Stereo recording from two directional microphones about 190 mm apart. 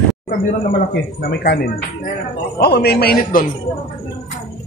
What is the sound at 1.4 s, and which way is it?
Speech, 55° left (ahead or behind).